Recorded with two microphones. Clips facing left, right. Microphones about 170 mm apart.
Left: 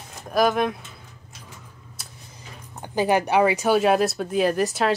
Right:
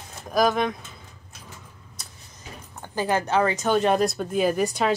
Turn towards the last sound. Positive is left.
turn(degrees=0)  # may be behind; listen again after turning